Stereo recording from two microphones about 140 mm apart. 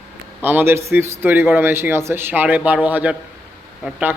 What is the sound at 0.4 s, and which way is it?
A man's voice, 15° right (ahead or behind).